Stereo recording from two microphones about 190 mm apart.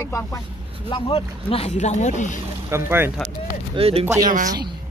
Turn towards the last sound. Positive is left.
turn(degrees=-45)  # may be behind; listen again after turning